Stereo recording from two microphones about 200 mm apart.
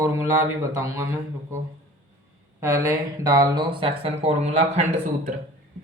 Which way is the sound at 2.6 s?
15° right (ahead or behind).